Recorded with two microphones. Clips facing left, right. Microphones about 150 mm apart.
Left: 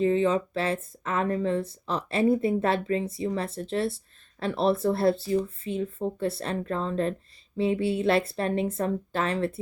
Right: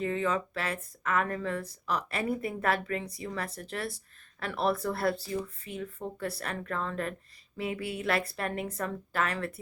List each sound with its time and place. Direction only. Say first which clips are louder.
0.0 s speech: left 7 dB; 25° left (ahead or behind)